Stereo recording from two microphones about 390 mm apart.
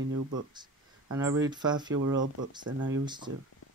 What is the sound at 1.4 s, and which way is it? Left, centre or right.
Speech, centre.